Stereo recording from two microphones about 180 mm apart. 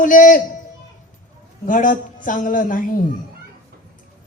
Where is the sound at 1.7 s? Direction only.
45° left (ahead or behind).